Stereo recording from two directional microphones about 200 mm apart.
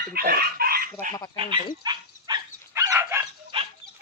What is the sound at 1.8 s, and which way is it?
Dog, 20° right (ahead or behind).